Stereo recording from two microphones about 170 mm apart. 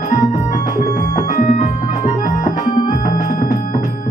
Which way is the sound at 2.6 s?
25° left (ahead or behind).